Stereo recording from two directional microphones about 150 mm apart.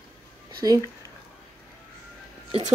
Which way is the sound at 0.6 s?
25° right (ahead or behind).